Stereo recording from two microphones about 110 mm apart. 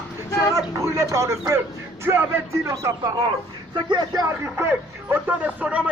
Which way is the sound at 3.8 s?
45° right (ahead or behind).